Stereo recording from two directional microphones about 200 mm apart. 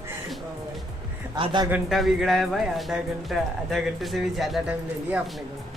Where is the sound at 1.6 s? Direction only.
5° right (ahead or behind).